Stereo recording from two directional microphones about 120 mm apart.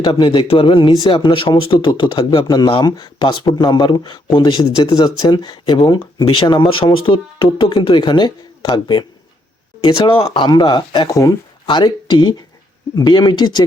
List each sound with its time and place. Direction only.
0.0 s speech: 45° left (ahead or behind)